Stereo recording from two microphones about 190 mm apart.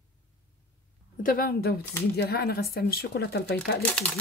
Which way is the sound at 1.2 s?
50° left (ahead or behind).